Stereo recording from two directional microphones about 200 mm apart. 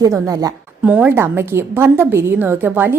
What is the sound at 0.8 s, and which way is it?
A woman's voice, 5° right (ahead or behind).